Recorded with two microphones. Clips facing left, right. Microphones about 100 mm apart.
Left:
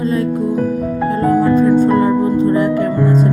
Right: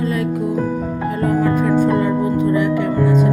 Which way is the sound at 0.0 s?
30° left (ahead or behind).